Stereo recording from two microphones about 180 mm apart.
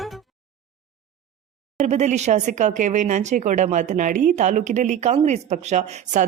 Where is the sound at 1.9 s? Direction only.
40° right (ahead or behind).